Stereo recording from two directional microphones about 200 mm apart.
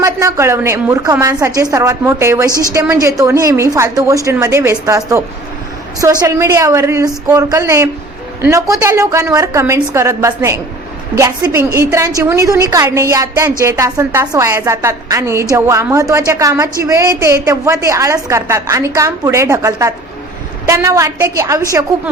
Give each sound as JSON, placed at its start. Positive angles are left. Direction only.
{"t": 0.0, "sound": "a woman's voice", "side_deg": -15}
{"t": 2.5, "sound": "a woman's voice", "side_deg": 15}
{"t": 2.8, "sound": "a woman's voice", "side_deg": -15}